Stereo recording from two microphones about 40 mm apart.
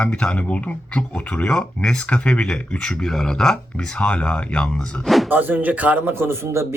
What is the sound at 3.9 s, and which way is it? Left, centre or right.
Speech, left.